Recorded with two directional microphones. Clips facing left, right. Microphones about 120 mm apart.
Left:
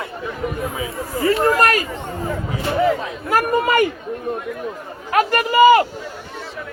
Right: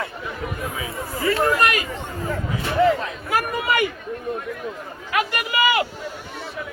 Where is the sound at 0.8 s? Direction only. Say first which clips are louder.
Left 6 dB; 25° left (ahead or behind).